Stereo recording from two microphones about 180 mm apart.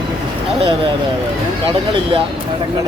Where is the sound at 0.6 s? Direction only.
30° right (ahead or behind).